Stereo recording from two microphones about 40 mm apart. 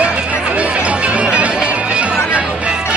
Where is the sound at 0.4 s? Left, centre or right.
Right.